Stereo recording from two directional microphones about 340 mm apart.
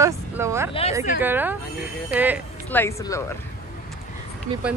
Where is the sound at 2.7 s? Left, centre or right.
Centre.